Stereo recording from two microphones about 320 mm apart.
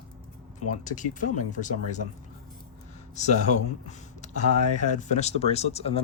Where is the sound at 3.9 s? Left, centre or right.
Left.